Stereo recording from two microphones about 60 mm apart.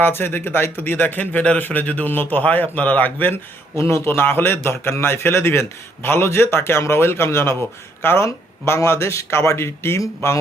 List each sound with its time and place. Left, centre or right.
0.0 s a man's voice: left
3.8 s a man's voice: left